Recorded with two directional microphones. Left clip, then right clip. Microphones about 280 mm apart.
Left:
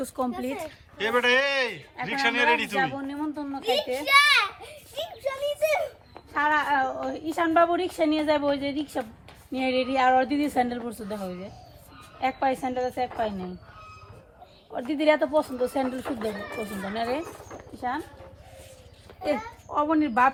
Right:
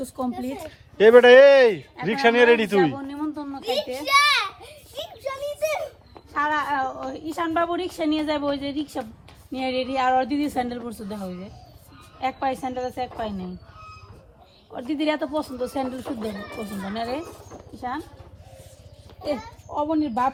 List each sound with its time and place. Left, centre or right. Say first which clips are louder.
0.0 s speech: even; left
0.4 s a woman's voice: left 1 dB; centre
0.9 s speech: right 11 dB; centre
2.7 s a sound: right 5 dB; left
9.5 s speech: even; left
14.7 s speech: left 3 dB; left
19.9 s speech: left 2 dB; centre